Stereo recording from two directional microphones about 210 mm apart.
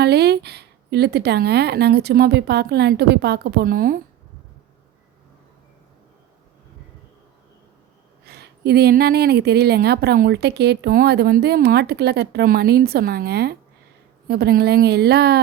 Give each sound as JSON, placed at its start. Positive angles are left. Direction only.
{"t": 0.0, "sound": "a woman's voice", "side_deg": -50}
{"t": 8.3, "sound": "a woman's voice", "side_deg": -50}